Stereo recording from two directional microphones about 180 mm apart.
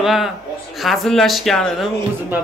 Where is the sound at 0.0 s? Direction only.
Centre (ahead or behind).